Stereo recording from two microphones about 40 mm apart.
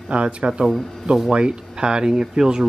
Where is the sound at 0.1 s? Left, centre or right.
Right.